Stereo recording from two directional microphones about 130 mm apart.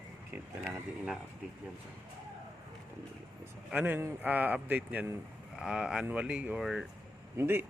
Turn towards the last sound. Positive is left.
turn(degrees=-15)  # may be behind; listen again after turning